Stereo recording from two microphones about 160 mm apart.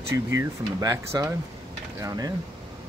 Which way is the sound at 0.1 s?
20° right (ahead or behind).